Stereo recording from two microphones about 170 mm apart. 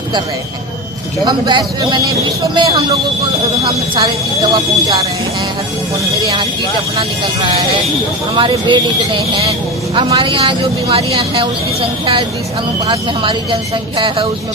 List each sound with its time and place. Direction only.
1.2 s speech: 25° right (ahead or behind)
8.4 s speech: 30° right (ahead or behind)